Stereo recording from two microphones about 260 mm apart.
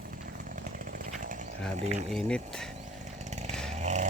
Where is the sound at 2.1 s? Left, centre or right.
Centre.